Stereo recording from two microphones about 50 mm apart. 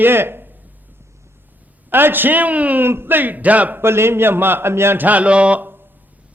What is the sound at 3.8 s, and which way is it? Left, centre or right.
A man's voice, right.